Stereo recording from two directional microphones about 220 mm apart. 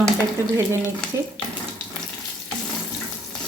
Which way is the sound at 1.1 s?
15° right (ahead or behind).